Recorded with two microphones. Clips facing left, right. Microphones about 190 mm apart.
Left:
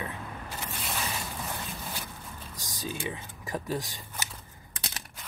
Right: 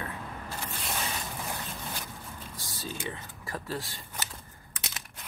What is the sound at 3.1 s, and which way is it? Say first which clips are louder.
Speech: left 3 dB; 15° left (ahead or behind).